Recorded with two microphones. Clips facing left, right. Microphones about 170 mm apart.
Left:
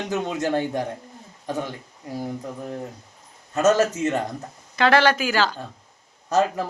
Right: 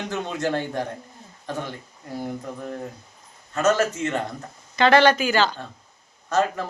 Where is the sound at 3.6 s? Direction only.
40° left (ahead or behind).